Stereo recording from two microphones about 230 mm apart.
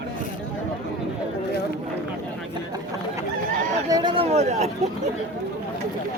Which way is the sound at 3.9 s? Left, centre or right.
Centre.